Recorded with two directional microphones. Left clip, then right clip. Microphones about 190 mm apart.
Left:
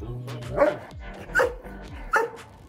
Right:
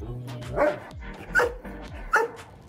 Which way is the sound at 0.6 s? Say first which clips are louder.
Left 2 dB; 10° left (ahead or behind).